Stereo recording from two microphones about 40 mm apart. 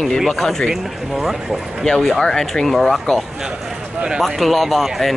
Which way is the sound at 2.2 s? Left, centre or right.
Centre.